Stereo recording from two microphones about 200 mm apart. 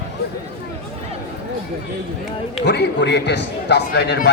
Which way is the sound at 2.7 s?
60° left (ahead or behind).